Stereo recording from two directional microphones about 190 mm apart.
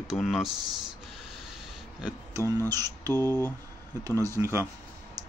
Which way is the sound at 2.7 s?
20° right (ahead or behind).